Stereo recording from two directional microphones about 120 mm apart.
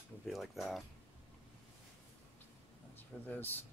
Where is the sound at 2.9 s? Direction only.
15° left (ahead or behind).